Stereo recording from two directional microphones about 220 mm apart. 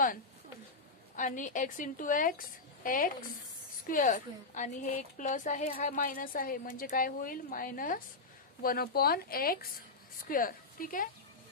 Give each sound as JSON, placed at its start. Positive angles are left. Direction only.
{"t": 1.1, "sound": "a woman's voice", "side_deg": 35}